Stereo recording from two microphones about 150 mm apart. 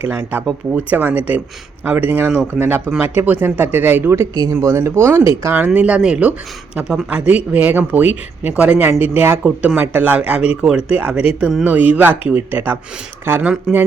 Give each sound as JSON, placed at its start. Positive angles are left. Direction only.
{"t": 0.0, "sound": "speech", "side_deg": -10}